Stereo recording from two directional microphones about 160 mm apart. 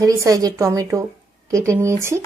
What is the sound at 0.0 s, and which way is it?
Speech, 20° right (ahead or behind).